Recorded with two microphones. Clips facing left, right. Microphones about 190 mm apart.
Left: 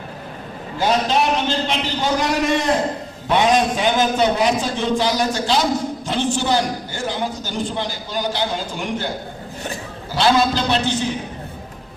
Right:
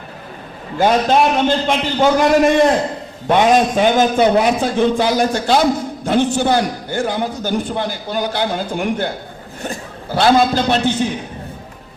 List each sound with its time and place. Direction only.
0.8 s a man's voice: 50° right (ahead or behind)